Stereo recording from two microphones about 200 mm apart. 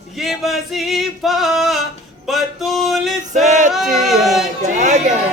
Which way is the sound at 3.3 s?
40° right (ahead or behind).